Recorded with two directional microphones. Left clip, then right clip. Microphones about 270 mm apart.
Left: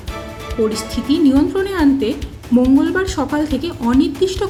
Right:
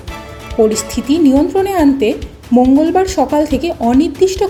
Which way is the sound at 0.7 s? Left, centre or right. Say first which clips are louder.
Right 3 dB; centre.